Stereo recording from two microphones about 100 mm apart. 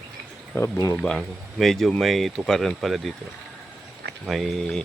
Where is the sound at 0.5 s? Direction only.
25° left (ahead or behind).